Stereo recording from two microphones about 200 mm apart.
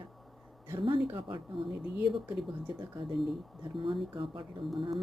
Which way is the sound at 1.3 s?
25° right (ahead or behind).